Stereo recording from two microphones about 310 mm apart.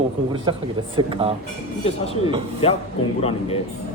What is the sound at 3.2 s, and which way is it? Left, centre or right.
Speech, centre.